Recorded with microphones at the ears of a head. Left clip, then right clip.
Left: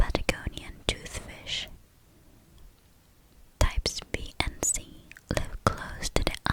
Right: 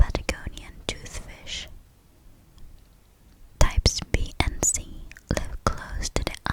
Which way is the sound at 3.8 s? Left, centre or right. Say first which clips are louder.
Right 6 dB; right.